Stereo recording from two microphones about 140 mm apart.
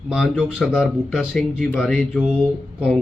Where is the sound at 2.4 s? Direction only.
10° right (ahead or behind).